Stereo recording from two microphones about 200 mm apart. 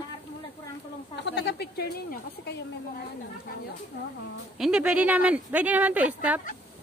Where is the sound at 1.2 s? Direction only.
60° left (ahead or behind).